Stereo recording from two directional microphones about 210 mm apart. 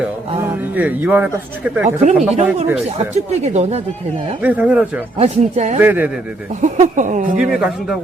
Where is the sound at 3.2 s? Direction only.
30° right (ahead or behind).